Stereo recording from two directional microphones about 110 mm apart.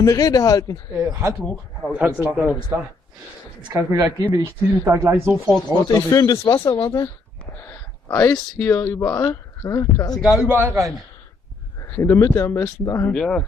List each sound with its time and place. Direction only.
0.0 s speech: 35° left (ahead or behind)
0.9 s speech: 30° right (ahead or behind)
1.8 s a man's voice: 5° right (ahead or behind)
3.7 s speech: 30° right (ahead or behind)
5.9 s speech: 35° left (ahead or behind)
8.3 s speech: 20° left (ahead or behind)
10.1 s a man's voice: centre (ahead or behind)
10.5 s speech: 20° right (ahead or behind)
11.9 s speech: 25° left (ahead or behind)
13.1 s speech: 10° left (ahead or behind)